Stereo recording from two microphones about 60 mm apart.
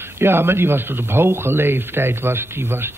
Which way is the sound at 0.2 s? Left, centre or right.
Right.